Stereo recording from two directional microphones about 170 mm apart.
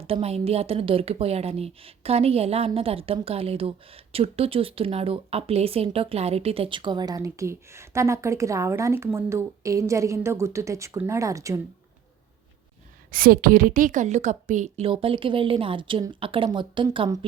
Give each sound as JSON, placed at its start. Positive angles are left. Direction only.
{"t": 0.0, "sound": "a woman's voice", "side_deg": -35}
{"t": 13.1, "sound": "a woman's voice", "side_deg": -60}
{"t": 14.8, "sound": "a woman's voice", "side_deg": -30}